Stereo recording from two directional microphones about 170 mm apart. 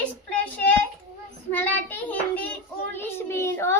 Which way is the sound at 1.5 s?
10° left (ahead or behind).